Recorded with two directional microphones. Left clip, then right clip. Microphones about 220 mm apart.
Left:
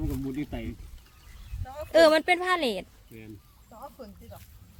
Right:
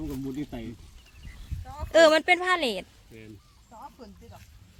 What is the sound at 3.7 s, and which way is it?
Music, 55° left (ahead or behind).